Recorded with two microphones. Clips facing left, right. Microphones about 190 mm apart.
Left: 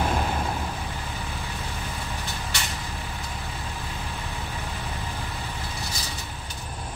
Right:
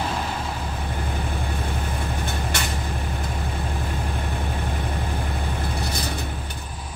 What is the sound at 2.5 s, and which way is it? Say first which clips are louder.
Vehicle: right 4 dB; 50° right (ahead or behind).